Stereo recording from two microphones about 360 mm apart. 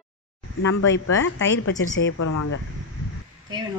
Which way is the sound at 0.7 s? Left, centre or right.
Left.